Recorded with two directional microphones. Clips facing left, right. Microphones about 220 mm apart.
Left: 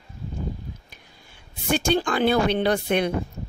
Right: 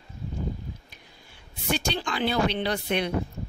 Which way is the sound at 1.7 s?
50° left (ahead or behind).